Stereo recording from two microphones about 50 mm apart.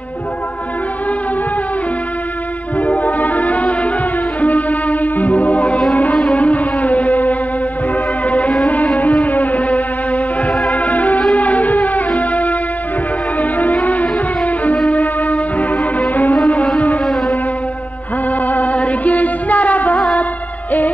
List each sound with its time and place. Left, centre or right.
2.8 s music: left
16.4 s a sound: left
18.4 s music: left